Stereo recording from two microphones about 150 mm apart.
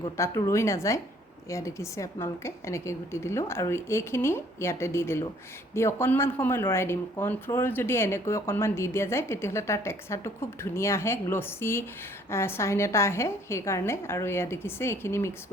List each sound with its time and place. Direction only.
0.2 s speech: 20° left (ahead or behind)